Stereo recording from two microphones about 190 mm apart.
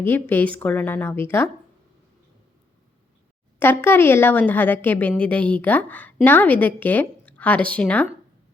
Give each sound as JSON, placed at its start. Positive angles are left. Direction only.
{"t": 0.0, "sound": "a woman's voice", "side_deg": 10}
{"t": 3.6, "sound": "a woman's voice", "side_deg": 10}